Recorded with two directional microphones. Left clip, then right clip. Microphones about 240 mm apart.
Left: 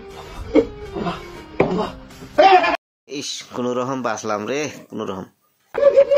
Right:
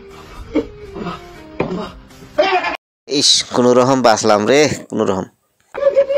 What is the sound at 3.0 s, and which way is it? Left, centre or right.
Speech, right.